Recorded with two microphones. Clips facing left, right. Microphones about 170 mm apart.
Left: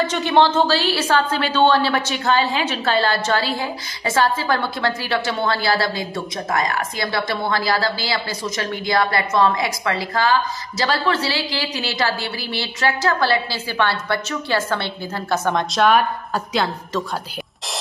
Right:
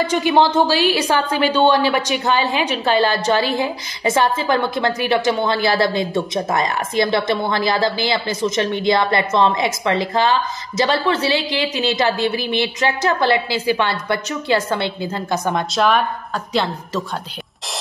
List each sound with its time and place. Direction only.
0.0 s a woman's voice: 10° right (ahead or behind)
15.7 s a woman's voice: centre (ahead or behind)